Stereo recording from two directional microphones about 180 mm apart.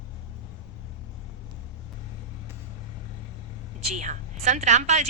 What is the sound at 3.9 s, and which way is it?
A woman's voice, 40° right (ahead or behind).